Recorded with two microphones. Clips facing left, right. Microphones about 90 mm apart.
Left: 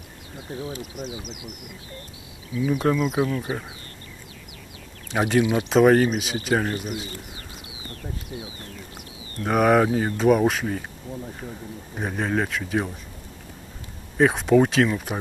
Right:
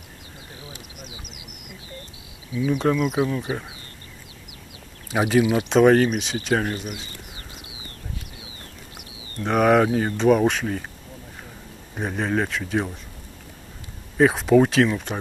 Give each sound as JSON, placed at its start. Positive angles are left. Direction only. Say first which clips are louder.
{"t": 0.6, "sound": "speech", "louder": "left 11 dB", "side_deg": 40}
{"t": 2.5, "sound": "speech", "louder": "right 1 dB", "side_deg": -15}
{"t": 5.1, "sound": "speech", "louder": "right 1 dB", "side_deg": -5}
{"t": 9.4, "sound": "speech", "louder": "right 1 dB", "side_deg": 5}
{"t": 11.9, "sound": "speech", "louder": "right 1 dB", "side_deg": 0}
{"t": 14.1, "sound": "speech", "louder": "right 1 dB", "side_deg": 0}